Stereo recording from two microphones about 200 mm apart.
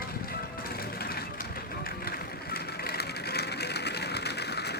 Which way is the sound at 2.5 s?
50° left (ahead or behind).